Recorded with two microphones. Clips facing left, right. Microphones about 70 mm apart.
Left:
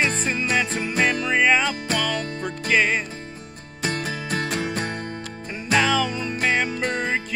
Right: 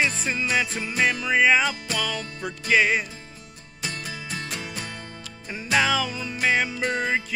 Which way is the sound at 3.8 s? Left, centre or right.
Left.